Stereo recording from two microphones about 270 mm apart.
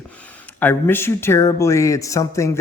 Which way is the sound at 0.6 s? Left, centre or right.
Centre.